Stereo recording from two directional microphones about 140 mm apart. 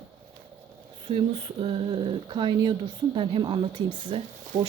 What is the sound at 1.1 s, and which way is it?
Speech, 40° right (ahead or behind).